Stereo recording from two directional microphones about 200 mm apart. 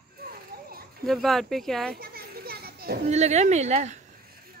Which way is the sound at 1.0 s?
Centre (ahead or behind).